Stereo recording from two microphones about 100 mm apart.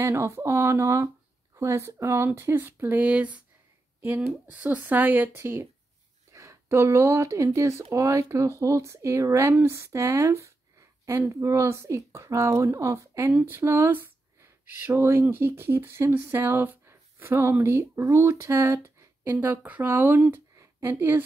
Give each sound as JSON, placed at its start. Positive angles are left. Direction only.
{"t": 0.0, "sound": "speech", "side_deg": -25}
{"t": 4.5, "sound": "a woman's voice", "side_deg": -15}
{"t": 19.3, "sound": "speech", "side_deg": -15}